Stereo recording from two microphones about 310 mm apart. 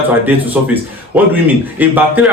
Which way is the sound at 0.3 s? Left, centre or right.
Centre.